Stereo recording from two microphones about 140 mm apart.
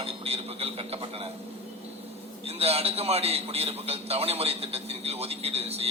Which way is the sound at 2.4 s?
45° right (ahead or behind).